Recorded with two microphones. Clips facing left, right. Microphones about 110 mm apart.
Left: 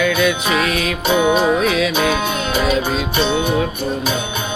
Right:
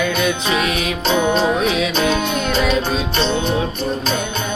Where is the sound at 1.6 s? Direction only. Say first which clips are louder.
Left 1 dB; 25° right (ahead or behind).